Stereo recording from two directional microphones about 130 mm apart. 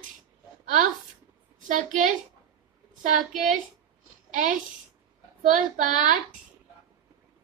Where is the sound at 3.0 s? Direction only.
80° right.